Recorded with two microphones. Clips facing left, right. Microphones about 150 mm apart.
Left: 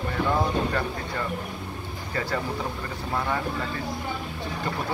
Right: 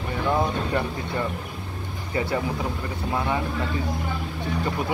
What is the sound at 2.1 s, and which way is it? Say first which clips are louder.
Speech: right 3 dB; 15° right (ahead or behind).